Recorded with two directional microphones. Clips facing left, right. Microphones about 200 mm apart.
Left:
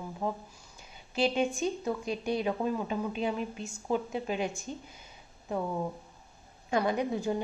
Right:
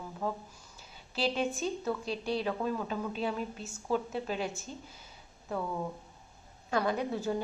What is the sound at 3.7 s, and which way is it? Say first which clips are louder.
A woman's voice: even; 15° left (ahead or behind).